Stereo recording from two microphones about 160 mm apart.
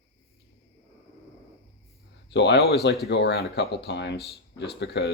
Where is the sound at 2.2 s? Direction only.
90° left.